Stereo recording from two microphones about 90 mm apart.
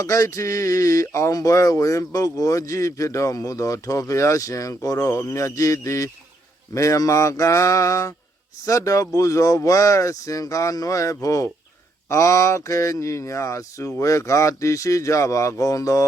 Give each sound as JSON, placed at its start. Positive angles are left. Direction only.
{"t": 0.0, "sound": "speech", "side_deg": 35}